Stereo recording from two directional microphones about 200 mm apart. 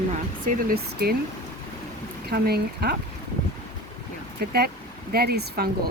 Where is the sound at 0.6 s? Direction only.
50° right (ahead or behind).